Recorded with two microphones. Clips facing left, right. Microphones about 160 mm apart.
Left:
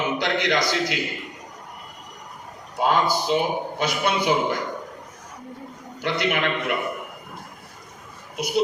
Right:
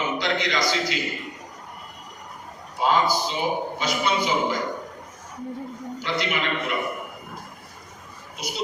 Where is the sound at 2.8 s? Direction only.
55° left (ahead or behind).